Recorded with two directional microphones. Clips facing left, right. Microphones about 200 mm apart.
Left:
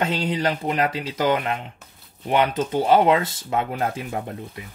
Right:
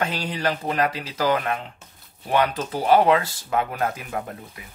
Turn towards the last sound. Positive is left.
turn(degrees=25)  # may be behind; listen again after turning